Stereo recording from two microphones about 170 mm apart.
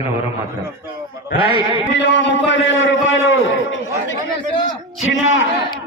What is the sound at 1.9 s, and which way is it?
A man's voice, 90° left.